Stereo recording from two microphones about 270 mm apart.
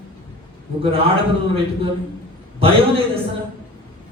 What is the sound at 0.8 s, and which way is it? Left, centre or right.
A man's voice, right.